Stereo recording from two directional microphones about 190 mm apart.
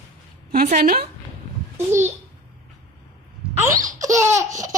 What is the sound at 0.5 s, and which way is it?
Speech, 45° right (ahead or behind).